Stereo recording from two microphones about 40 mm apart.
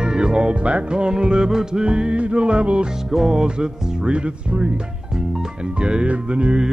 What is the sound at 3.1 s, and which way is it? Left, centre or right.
Speech, centre.